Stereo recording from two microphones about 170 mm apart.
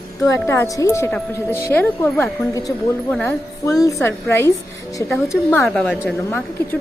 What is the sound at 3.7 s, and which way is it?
Speech, 20° left (ahead or behind).